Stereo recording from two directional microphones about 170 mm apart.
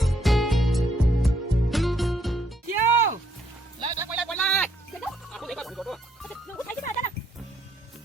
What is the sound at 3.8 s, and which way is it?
Music, 25° right (ahead or behind).